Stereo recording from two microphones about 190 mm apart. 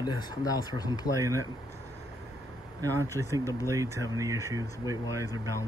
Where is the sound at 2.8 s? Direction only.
15° right (ahead or behind).